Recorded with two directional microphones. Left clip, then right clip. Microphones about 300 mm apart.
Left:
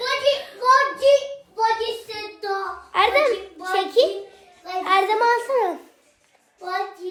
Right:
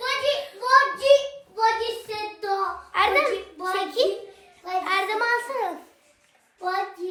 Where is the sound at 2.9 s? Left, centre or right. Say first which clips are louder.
Left 3 dB; left.